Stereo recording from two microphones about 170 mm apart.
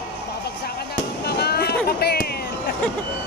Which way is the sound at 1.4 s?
70° left (ahead or behind).